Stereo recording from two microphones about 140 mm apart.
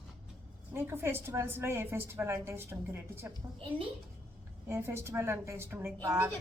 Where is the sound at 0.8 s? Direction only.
15° right (ahead or behind).